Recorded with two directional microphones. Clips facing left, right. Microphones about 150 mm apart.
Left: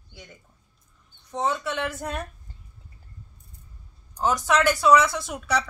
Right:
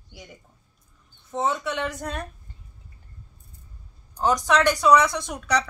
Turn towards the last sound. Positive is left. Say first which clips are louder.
# right 1 dB
turn(degrees=5)  # may be behind; listen again after turning